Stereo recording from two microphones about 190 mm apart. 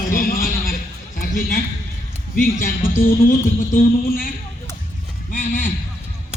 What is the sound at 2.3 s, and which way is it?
Speech, 45° left (ahead or behind).